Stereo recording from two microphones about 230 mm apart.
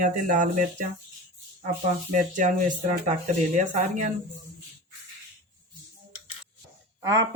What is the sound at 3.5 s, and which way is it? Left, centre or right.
Speech, right.